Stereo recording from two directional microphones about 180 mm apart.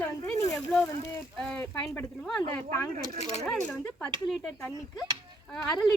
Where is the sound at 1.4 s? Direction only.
5° left (ahead or behind).